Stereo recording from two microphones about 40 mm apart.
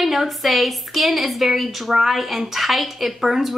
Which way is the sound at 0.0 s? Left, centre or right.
Centre.